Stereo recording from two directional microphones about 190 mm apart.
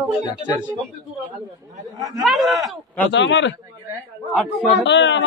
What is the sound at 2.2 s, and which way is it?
Speech, centre (ahead or behind).